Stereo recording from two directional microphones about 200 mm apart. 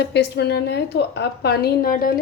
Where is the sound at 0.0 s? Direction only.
55° left (ahead or behind).